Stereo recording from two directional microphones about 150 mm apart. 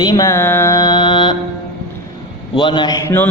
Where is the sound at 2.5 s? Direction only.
30° left (ahead or behind).